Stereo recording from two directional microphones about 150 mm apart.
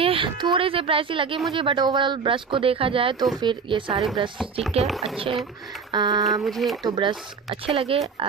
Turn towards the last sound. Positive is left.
turn(degrees=-40)  # may be behind; listen again after turning